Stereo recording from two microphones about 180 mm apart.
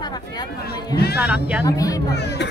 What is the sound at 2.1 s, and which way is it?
Speech, 70° left (ahead or behind).